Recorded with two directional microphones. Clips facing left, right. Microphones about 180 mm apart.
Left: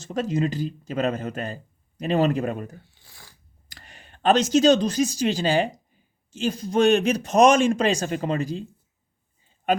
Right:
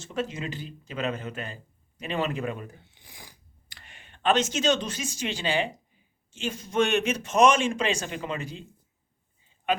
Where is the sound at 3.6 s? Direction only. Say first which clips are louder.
Left 4 dB; 40° left (ahead or behind).